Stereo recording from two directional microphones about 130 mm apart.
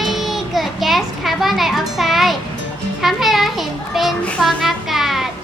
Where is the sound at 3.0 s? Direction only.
Centre (ahead or behind).